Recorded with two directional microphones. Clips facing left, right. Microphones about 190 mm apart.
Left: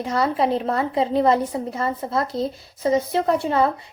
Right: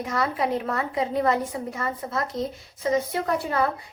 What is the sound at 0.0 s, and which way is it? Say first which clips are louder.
A woman's voice: left 5 dB; 30° left (ahead or behind).